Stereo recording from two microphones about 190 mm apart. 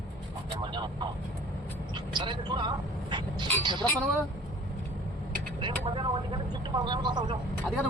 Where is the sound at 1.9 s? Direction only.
25° right (ahead or behind).